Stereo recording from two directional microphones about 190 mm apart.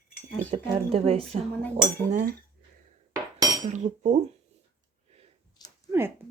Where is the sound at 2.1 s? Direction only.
45° right (ahead or behind).